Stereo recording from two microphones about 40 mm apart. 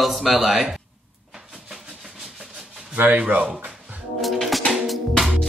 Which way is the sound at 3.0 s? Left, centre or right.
Right.